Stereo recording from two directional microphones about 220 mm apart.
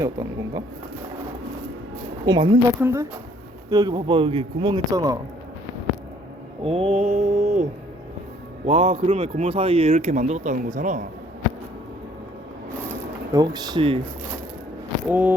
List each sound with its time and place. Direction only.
0.0 s speech: 10° right (ahead or behind)
2.2 s speech: 20° right (ahead or behind)
6.6 s mantra: 25° right (ahead or behind)
8.6 s speech: 25° right (ahead or behind)
13.3 s speech: 15° right (ahead or behind)
15.1 s speech: 5° right (ahead or behind)